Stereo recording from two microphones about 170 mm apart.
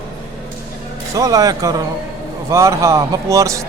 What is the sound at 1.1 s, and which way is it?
Speech, 20° right (ahead or behind).